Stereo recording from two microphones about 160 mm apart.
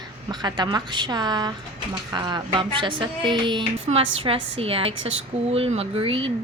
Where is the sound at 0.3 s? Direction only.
25° right (ahead or behind).